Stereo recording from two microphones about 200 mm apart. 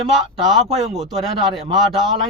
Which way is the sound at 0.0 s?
Centre (ahead or behind).